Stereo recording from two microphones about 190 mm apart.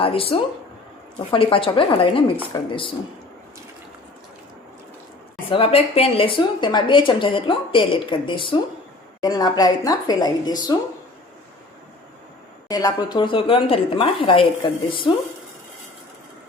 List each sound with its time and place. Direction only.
0.0 s speech: 30° left (ahead or behind)
5.5 s speech: 30° left (ahead or behind)
12.6 s speech: 20° left (ahead or behind)